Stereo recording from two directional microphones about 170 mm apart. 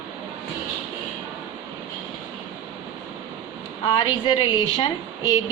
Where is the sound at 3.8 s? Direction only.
30° left (ahead or behind).